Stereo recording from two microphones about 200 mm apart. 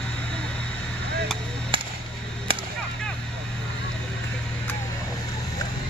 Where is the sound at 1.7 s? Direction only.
25° right (ahead or behind).